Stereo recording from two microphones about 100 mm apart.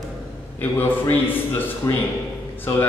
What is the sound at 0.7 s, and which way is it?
Speech, 20° left (ahead or behind).